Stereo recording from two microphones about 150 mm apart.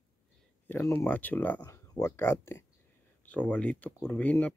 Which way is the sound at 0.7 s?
15° left (ahead or behind).